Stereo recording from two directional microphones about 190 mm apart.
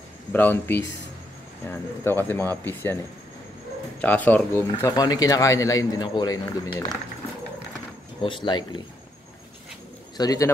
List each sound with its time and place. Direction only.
0.3 s speech: 10° left (ahead or behind)
2.0 s speech: 10° left (ahead or behind)
4.0 s speech: 10° left (ahead or behind)
8.2 s speech: 25° left (ahead or behind)
10.1 s speech: 20° left (ahead or behind)